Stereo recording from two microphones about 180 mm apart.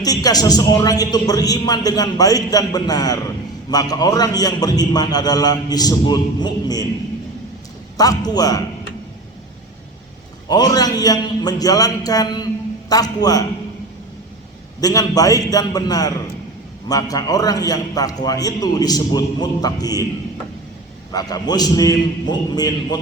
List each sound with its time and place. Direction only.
0.0 s speech: 20° left (ahead or behind)
7.9 s speech: 20° left (ahead or behind)
10.5 s speech: 20° left (ahead or behind)
14.8 s speech: 20° left (ahead or behind)
21.1 s speech: 20° left (ahead or behind)